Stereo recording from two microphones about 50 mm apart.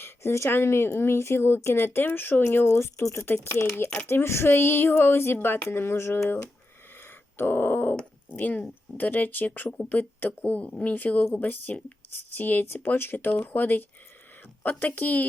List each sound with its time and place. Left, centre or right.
0.0 s speech: left
7.3 s speech: left